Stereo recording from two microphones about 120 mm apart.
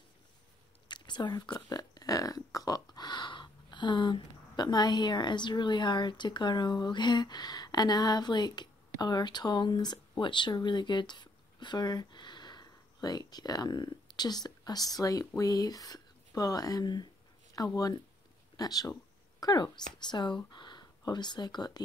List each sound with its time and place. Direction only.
0.8 s speech: 40° left (ahead or behind)